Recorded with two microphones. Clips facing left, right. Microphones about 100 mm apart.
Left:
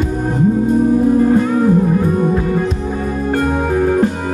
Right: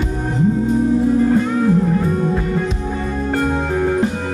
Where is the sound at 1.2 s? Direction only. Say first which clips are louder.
Left 3 dB; 10° left (ahead or behind).